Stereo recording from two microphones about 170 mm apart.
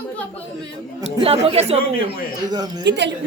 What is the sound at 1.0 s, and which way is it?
Speech, 30° right (ahead or behind).